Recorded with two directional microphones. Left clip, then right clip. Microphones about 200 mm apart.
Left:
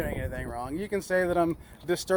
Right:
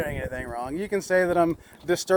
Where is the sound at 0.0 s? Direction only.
30° right (ahead or behind).